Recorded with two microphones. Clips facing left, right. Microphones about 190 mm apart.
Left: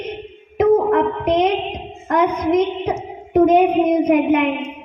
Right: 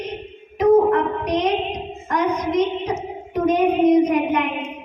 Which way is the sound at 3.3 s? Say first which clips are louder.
Left 5 dB; 55° left (ahead or behind).